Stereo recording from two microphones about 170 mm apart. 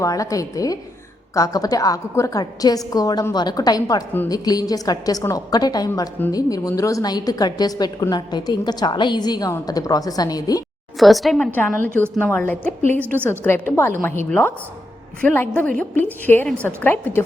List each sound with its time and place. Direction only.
0.0 s a woman's voice: 20° left (ahead or behind)
10.9 s a woman's voice: centre (ahead or behind)
11.5 s a woman's voice: 10° left (ahead or behind)